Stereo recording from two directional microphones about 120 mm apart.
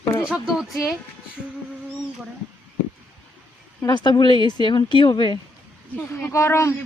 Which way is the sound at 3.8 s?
40° left (ahead or behind).